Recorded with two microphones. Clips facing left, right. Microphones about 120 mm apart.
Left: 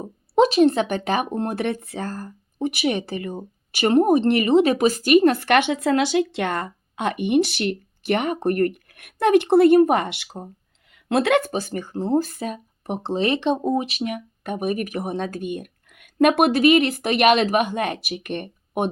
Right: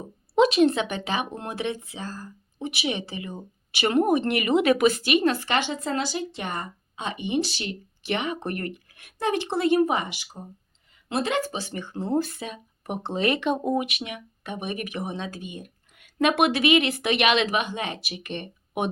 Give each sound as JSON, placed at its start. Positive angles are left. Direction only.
{"t": 0.0, "sound": "speech", "side_deg": 40}
{"t": 16.2, "sound": "a woman's voice", "side_deg": 45}